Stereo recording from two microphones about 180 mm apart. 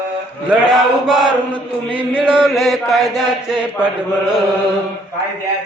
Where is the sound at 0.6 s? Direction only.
Centre (ahead or behind).